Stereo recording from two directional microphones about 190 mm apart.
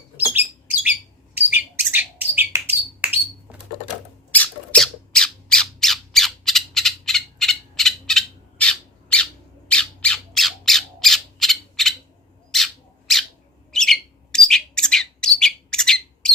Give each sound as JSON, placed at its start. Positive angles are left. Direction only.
{"t": 0.2, "sound": "bird", "side_deg": -10}
{"t": 4.3, "sound": "squawk", "side_deg": 5}
{"t": 12.5, "sound": "bird", "side_deg": 0}